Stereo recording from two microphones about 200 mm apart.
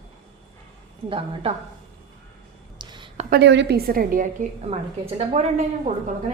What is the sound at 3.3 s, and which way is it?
Speech, 55° right (ahead or behind).